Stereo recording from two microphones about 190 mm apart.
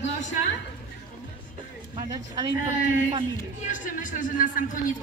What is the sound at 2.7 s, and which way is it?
A woman's voice, 40° left (ahead or behind).